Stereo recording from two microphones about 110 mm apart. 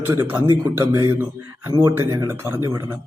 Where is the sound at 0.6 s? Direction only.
30° right (ahead or behind).